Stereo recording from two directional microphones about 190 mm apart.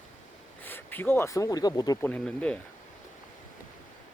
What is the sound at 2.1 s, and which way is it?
Speech, 5° left (ahead or behind).